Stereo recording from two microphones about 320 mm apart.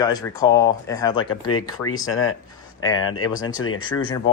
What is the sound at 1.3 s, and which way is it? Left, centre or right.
Speech, left.